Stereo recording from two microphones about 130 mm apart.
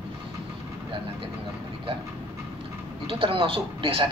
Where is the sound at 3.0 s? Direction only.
45° right (ahead or behind).